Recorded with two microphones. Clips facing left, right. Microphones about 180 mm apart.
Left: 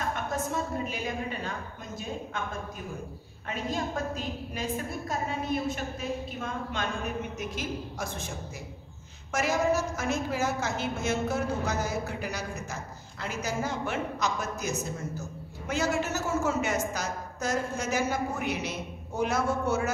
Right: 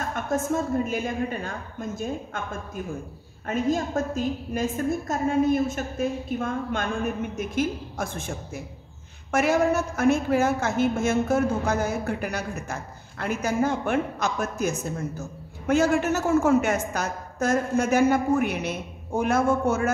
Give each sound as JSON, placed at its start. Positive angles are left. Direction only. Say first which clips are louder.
{"t": 0.5, "sound": "a woman's voice", "louder": "right 7 dB", "side_deg": -45}
{"t": 3.4, "sound": "a woman's voice", "louder": "right 7 dB", "side_deg": -45}